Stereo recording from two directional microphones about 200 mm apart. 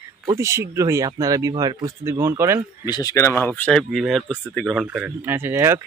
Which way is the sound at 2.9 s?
20° left (ahead or behind).